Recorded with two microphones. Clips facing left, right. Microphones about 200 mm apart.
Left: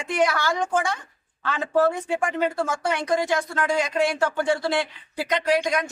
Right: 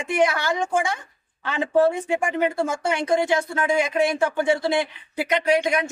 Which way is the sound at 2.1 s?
10° right (ahead or behind).